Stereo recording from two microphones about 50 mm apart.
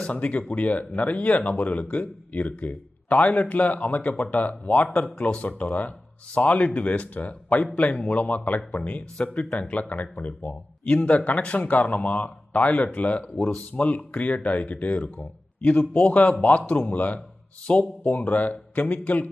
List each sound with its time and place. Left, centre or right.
0.1 s speech: left
13.3 s speech: centre
13.7 s speech: left